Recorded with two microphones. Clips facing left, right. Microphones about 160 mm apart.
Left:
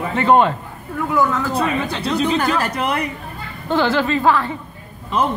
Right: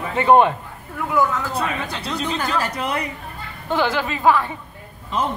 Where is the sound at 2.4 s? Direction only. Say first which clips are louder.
Left 4 dB; 60° left (ahead or behind).